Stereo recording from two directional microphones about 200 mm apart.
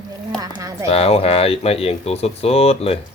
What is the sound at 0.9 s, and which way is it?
Speech, 30° left (ahead or behind).